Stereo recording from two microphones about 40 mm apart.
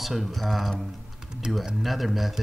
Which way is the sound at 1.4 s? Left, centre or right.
Centre.